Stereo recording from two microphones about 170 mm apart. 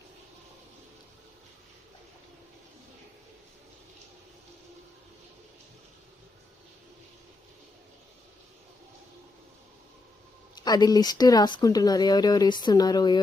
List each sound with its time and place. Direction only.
10.5 s speech: 25° left (ahead or behind)